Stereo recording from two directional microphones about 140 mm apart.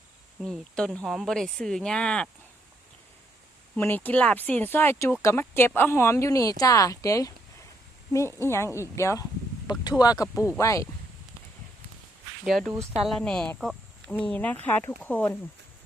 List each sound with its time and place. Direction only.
0.4 s speech: centre (ahead or behind)
3.8 s speech: 15° left (ahead or behind)
12.5 s speech: centre (ahead or behind)